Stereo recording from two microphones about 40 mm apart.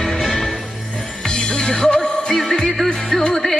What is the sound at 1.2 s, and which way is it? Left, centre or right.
Music, left.